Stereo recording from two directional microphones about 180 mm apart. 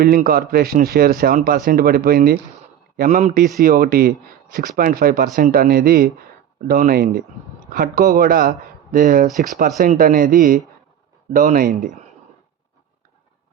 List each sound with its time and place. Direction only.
0.0 s a man's voice: 55° right (ahead or behind)
3.0 s speech: 40° right (ahead or behind)